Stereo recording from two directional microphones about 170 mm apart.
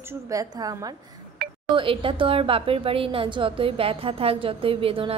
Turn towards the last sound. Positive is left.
turn(degrees=-30)  # may be behind; listen again after turning